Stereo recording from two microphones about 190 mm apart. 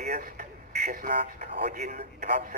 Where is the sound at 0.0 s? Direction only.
40° right (ahead or behind).